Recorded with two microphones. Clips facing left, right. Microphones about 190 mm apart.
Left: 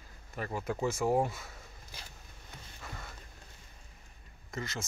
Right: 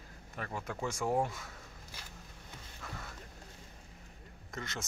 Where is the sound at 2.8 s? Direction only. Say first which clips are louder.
Right 1 dB; 5° left (ahead or behind).